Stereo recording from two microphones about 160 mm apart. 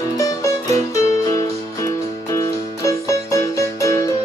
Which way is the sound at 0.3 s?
20° left (ahead or behind).